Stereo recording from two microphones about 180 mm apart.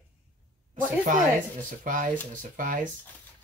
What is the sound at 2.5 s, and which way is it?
Speech, 45° right (ahead or behind).